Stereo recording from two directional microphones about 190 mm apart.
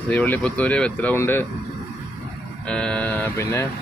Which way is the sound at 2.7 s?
5° left (ahead or behind).